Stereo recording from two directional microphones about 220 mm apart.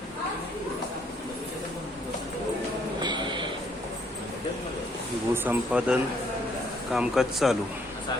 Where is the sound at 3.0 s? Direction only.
20° right (ahead or behind).